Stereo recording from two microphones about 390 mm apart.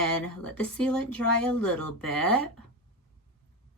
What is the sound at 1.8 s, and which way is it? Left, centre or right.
Speech, left.